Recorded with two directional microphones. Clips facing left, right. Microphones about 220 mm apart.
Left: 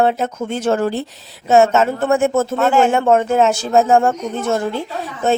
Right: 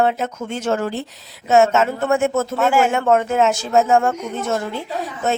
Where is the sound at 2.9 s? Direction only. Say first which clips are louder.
Left 3 dB; 30° left (ahead or behind).